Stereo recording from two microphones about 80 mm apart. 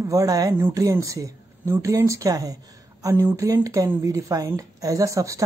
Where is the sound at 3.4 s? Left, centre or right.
Right.